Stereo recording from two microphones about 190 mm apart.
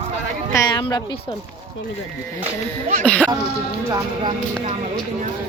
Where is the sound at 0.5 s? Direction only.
20° left (ahead or behind).